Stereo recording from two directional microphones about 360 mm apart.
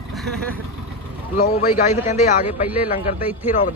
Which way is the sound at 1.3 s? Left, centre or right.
Centre.